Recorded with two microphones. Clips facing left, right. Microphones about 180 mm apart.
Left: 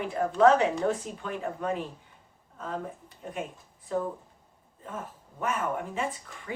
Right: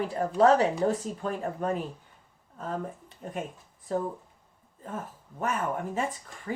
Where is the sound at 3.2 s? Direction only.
45° right (ahead or behind).